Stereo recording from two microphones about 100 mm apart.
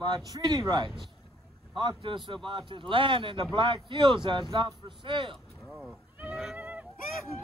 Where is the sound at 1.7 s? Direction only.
55° right (ahead or behind).